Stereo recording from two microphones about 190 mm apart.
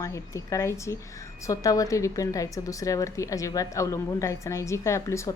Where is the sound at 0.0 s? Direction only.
15° left (ahead or behind).